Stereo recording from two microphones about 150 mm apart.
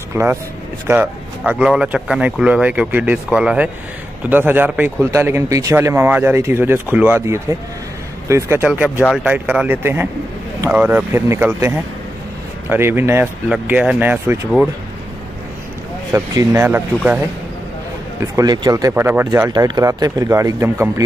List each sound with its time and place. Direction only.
0.1 s speech: 15° right (ahead or behind)
16.1 s speech: 20° right (ahead or behind)
18.2 s speech: 25° right (ahead or behind)
19.5 s speech: 25° right (ahead or behind)